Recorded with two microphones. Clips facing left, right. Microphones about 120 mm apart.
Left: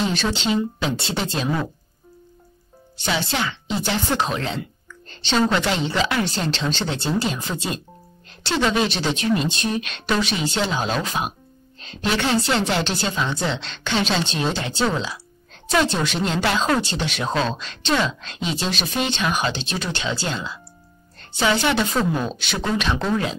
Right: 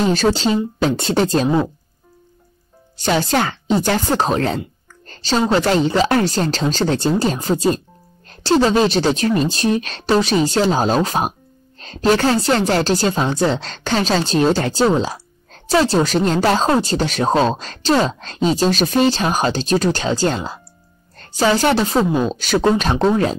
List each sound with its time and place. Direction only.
0.0 s speech: 40° right (ahead or behind)
3.0 s speech: 45° right (ahead or behind)
4.8 s a sound: 45° right (ahead or behind)
5.5 s a woman's voice: 40° right (ahead or behind)